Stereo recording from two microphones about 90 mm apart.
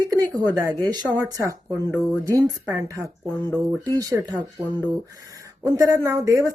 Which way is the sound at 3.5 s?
45° right (ahead or behind).